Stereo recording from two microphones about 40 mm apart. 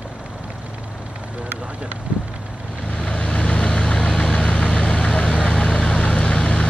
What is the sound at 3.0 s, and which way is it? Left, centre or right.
Vehicle, left.